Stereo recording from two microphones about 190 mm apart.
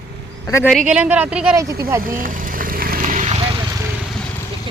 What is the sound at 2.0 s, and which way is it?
Vehicle, 45° right (ahead or behind).